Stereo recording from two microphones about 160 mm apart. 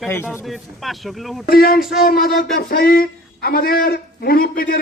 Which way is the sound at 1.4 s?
70° left (ahead or behind).